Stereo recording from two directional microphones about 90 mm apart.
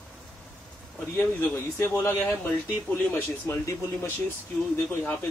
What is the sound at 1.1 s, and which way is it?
Speech, 25° left (ahead or behind).